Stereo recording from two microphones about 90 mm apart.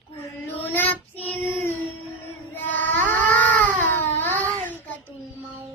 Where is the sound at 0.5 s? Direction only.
20° left (ahead or behind).